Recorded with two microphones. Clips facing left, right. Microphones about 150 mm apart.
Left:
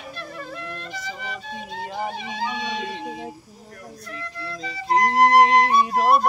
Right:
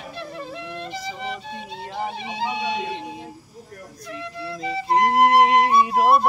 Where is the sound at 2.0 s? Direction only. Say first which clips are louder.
Right 3 dB; 25° right (ahead or behind).